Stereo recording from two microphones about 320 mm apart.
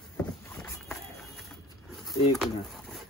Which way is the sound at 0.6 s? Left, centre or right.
Centre.